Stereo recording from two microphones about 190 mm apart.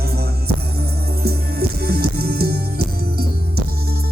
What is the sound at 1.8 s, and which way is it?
Music, 55° right (ahead or behind).